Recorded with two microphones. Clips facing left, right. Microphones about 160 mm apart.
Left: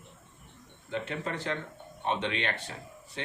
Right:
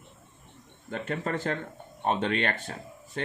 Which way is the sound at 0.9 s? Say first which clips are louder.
Right 3 dB; 45° right (ahead or behind).